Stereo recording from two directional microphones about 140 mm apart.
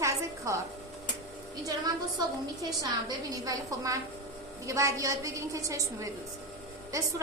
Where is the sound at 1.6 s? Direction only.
25° right (ahead or behind).